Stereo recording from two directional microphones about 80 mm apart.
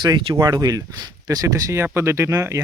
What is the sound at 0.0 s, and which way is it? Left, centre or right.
Speech, right.